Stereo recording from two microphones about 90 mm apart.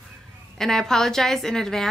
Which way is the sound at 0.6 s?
5° left (ahead or behind).